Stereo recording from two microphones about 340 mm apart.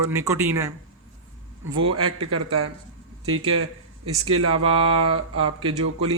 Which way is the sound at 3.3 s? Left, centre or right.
Right.